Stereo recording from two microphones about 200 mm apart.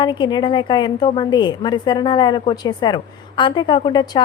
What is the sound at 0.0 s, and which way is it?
A woman's voice, 20° left (ahead or behind).